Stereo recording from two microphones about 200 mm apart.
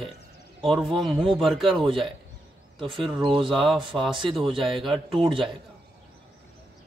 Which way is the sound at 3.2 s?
25° right (ahead or behind).